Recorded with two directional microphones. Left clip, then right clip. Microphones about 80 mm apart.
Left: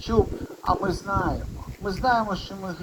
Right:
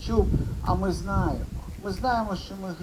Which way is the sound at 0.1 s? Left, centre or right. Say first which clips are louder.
Left 3 dB; right.